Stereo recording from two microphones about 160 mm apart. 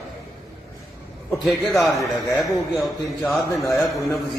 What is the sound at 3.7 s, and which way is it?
Speech, 20° left (ahead or behind).